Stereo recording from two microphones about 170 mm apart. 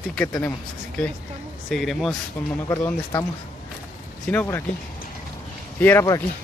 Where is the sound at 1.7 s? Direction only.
Centre (ahead or behind).